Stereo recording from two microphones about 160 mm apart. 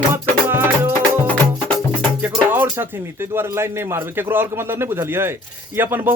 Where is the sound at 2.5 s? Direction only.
15° right (ahead or behind).